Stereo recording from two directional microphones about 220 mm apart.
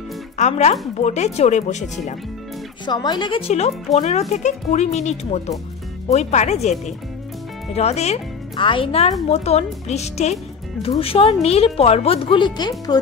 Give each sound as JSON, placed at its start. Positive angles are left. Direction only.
{"t": 0.4, "sound": "speech", "side_deg": 30}
{"t": 2.8, "sound": "speech", "side_deg": 20}